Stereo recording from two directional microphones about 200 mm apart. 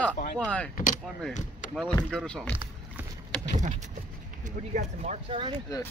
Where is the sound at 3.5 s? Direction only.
35° right (ahead or behind).